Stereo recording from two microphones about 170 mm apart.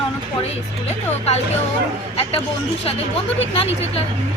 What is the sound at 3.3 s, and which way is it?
Speech, 35° left (ahead or behind).